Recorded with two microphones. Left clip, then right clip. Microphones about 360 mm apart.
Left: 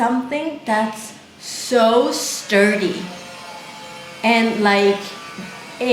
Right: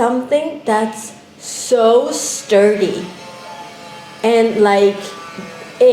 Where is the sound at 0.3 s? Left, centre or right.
Centre.